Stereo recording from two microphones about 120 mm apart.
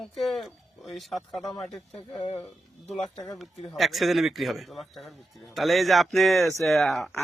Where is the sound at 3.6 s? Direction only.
Centre (ahead or behind).